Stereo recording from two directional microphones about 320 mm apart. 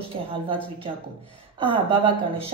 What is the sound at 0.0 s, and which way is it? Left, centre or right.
Speech, centre.